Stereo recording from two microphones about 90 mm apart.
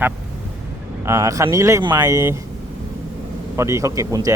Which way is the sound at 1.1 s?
35° right (ahead or behind).